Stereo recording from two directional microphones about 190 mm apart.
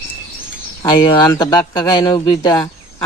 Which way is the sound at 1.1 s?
20° left (ahead or behind).